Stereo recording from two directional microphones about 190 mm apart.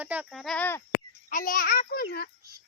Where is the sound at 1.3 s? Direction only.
45° left (ahead or behind).